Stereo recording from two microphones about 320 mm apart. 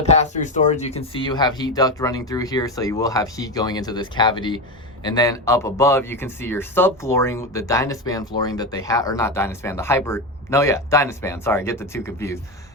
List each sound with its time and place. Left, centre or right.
0.0 s speech: left